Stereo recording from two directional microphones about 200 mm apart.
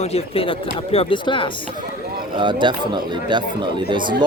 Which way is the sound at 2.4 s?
25° right (ahead or behind).